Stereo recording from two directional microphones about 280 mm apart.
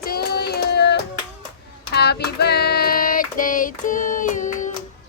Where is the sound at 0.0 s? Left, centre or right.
Left.